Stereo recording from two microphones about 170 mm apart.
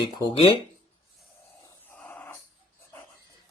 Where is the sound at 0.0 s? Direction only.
25° left (ahead or behind).